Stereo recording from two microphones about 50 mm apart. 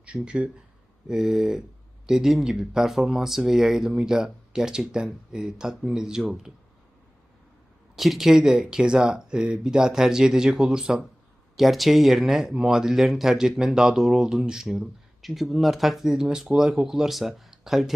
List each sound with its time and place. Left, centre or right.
0.0 s speech: right
1.0 s speech: centre
7.9 s speech: centre
11.5 s speech: centre